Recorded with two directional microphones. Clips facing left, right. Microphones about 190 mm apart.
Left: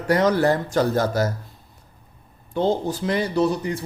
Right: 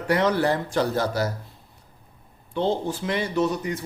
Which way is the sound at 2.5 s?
40° left (ahead or behind).